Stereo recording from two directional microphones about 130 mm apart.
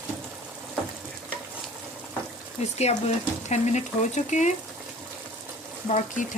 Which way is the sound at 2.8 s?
55° left (ahead or behind).